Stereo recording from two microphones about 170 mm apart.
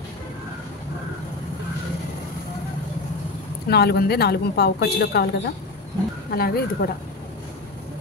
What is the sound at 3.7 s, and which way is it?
A woman's voice, 70° left (ahead or behind).